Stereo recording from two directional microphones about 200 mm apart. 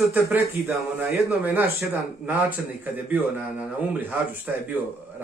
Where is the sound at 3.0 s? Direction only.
10° right (ahead or behind).